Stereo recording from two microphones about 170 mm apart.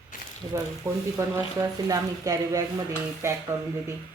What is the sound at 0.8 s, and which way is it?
Speech, 15° right (ahead or behind).